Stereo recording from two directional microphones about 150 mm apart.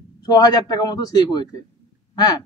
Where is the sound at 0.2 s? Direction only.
25° left (ahead or behind).